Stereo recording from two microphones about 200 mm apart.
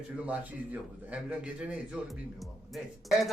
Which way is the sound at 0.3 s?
5° right (ahead or behind).